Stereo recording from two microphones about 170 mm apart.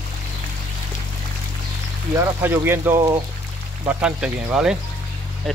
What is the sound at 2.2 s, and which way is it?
Speech, 15° right (ahead or behind).